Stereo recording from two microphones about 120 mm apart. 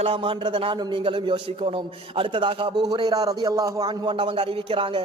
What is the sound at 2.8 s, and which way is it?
A man's voice, 35° right (ahead or behind).